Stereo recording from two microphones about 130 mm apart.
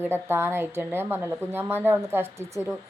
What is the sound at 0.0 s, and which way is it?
A woman's voice, 20° right (ahead or behind).